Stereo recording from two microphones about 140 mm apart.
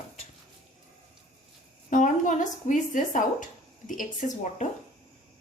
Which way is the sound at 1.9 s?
65° left (ahead or behind).